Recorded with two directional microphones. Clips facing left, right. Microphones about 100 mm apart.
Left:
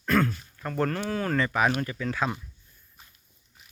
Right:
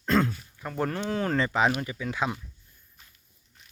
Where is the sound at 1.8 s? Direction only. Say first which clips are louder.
Left 1 dB; 10° right (ahead or behind).